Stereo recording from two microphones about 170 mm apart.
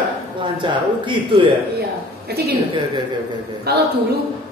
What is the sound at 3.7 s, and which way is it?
Speech, 70° right (ahead or behind).